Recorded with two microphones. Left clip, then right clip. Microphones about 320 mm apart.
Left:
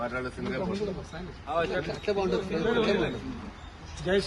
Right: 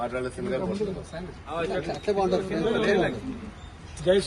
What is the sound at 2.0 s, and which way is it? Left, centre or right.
Speech, right.